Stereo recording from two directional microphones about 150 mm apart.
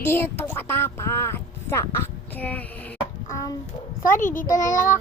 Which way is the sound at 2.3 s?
10° left (ahead or behind).